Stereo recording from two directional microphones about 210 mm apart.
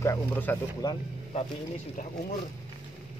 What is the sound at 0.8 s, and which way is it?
Speech, 20° left (ahead or behind).